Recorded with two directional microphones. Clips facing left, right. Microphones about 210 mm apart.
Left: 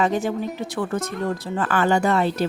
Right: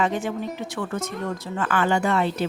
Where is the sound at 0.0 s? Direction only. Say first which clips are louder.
Left 3 dB; 40° left (ahead or behind).